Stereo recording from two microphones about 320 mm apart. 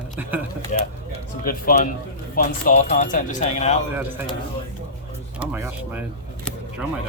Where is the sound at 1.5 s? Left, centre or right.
Left.